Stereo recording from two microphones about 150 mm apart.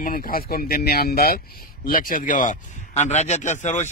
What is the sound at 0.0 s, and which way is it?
Speech, 80° left.